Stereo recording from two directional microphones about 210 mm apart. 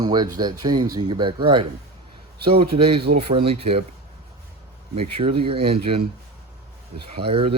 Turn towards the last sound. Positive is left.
turn(degrees=-25)  # may be behind; listen again after turning